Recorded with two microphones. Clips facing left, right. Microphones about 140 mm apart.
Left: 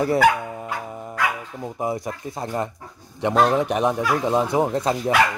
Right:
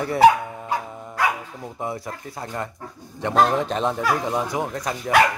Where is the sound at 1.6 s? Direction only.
20° left (ahead or behind).